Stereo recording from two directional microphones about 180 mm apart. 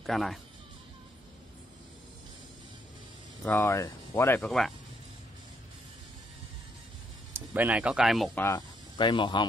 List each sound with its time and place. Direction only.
0.0 s speech: centre (ahead or behind)
3.4 s speech: 15° left (ahead or behind)
4.4 s speech: 5° left (ahead or behind)
7.3 s speech: 10° right (ahead or behind)
8.4 s speech: 15° left (ahead or behind)
8.9 s speech: 25° left (ahead or behind)